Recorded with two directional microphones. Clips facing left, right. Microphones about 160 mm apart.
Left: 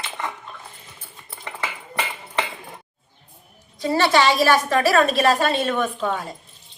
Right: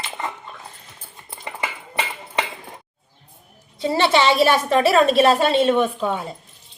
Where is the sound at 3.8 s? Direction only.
25° right (ahead or behind).